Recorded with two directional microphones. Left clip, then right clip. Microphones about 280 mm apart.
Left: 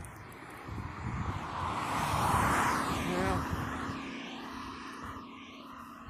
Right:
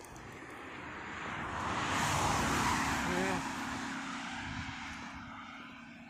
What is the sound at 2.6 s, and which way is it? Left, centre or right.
Vehicle, right.